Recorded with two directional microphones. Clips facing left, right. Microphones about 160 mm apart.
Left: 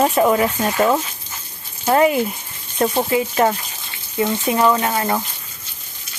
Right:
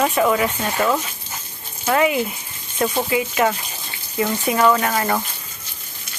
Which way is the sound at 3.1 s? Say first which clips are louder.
Left 2 dB; 35° left (ahead or behind).